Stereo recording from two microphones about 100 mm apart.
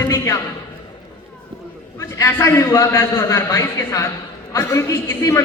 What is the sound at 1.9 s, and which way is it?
Speech, 25° left (ahead or behind).